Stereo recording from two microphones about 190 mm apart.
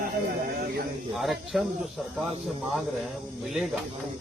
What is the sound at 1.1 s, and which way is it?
Speech, centre (ahead or behind).